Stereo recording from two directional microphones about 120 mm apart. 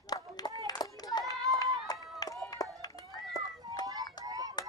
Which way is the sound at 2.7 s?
30° left (ahead or behind).